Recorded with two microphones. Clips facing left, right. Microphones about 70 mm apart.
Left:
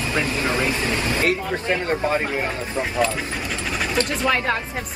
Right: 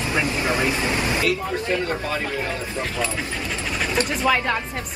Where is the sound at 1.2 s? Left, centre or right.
Left.